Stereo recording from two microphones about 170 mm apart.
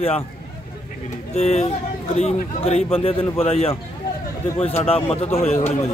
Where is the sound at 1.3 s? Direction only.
40° left (ahead or behind).